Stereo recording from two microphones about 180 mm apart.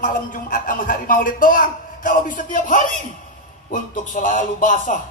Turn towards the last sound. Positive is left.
turn(degrees=45)  # may be behind; listen again after turning